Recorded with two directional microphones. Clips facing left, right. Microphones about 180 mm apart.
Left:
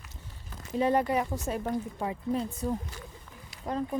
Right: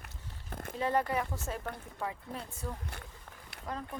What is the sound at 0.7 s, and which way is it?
Speech, 15° left (ahead or behind).